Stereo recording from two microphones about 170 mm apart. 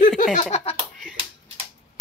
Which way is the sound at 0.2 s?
45° left (ahead or behind).